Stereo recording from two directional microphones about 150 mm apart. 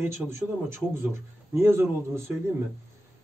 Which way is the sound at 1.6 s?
15° right (ahead or behind).